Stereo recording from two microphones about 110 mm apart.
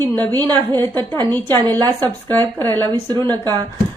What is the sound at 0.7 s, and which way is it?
Speech, 40° right (ahead or behind).